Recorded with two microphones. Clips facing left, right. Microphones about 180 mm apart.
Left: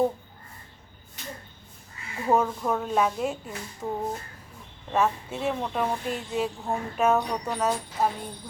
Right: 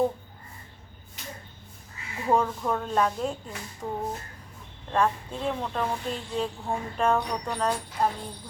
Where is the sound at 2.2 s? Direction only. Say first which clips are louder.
Left 1 dB; 5° left (ahead or behind).